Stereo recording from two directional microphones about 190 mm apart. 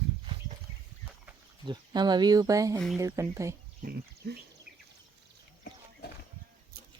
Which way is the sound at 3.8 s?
55° right (ahead or behind).